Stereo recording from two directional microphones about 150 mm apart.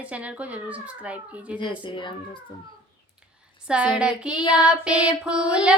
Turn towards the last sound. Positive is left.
turn(degrees=-5)  # may be behind; listen again after turning